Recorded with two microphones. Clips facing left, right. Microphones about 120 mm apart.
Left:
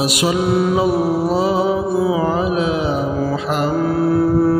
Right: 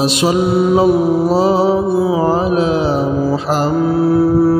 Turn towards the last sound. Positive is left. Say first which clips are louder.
# right 3 dB
turn(degrees=-10)  # may be behind; listen again after turning